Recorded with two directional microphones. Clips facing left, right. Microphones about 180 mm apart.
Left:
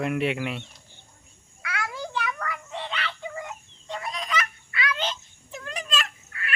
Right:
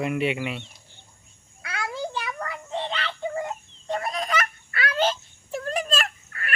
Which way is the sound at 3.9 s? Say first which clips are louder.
Right 4 dB; 50° right (ahead or behind).